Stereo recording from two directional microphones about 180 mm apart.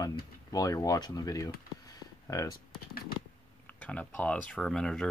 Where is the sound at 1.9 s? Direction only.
20° left (ahead or behind).